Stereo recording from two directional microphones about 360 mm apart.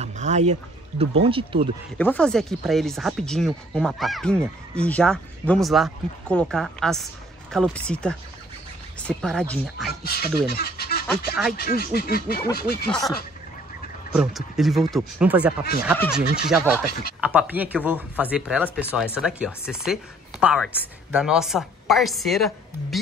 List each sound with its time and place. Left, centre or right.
0.0 s a sound: centre
1.2 s speech: centre
2.0 s speech: centre
10.0 s speech: left
14.1 s speech: centre